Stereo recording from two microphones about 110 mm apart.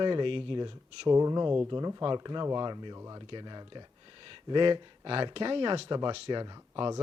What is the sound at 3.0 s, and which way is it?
Speech, 30° right (ahead or behind).